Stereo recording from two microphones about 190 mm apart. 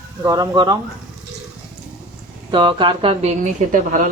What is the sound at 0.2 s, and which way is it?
Speech, 20° right (ahead or behind).